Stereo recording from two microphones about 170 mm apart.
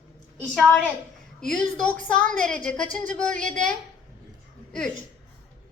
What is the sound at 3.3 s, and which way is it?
Speech, 50° right (ahead or behind).